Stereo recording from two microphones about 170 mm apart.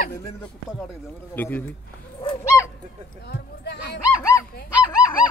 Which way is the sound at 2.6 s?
15° left (ahead or behind).